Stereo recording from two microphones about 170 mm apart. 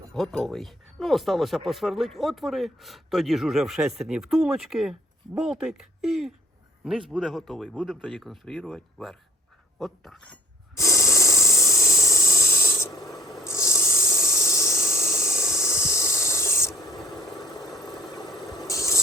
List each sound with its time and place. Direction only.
0.1 s speech: centre (ahead or behind)
10.8 s a sound: 20° left (ahead or behind)
17.2 s engine: centre (ahead or behind)
18.4 s mechanisms: centre (ahead or behind)
18.7 s spray: 20° left (ahead or behind)